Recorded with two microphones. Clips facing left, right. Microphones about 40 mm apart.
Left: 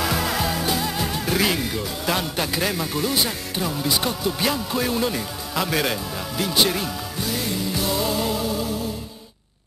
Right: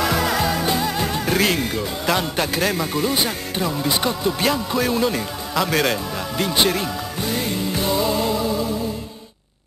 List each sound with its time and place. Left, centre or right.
0.0 s a man's voice: centre
6.3 s music: centre